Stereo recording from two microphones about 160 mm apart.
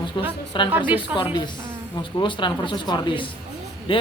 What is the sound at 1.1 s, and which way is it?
A man's voice, 30° left (ahead or behind).